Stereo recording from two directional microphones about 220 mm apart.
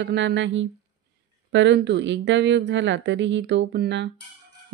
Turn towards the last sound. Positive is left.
turn(degrees=-50)  # may be behind; listen again after turning